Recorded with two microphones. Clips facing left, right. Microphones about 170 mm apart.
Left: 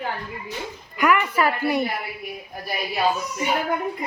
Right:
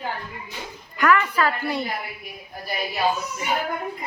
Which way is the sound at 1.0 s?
15° left (ahead or behind).